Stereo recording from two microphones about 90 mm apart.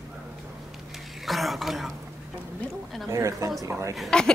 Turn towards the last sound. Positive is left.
turn(degrees=10)  # may be behind; listen again after turning